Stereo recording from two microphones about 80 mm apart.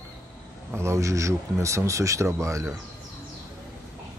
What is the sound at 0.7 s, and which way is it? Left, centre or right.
Speech, right.